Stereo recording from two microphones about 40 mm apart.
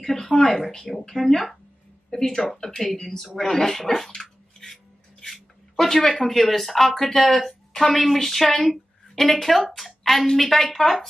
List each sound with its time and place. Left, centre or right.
0.0 s speech: centre